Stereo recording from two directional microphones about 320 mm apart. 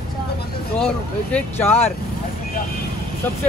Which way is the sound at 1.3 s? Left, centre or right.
Centre.